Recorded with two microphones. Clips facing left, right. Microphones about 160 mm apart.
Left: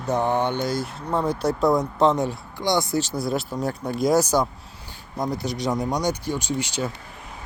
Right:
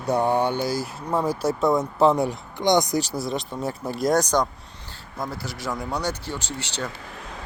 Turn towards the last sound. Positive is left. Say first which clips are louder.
# left 5 dB
turn(degrees=10)  # may be behind; listen again after turning